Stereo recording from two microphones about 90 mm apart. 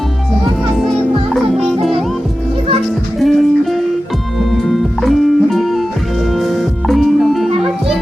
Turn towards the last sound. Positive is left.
turn(degrees=0)  # may be behind; listen again after turning